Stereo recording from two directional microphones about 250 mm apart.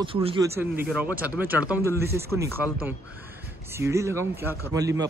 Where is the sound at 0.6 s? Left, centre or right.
Centre.